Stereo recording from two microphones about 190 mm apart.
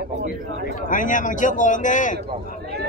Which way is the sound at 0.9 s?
45° left (ahead or behind).